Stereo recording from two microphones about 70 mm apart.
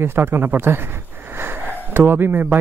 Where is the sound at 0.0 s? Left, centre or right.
Right.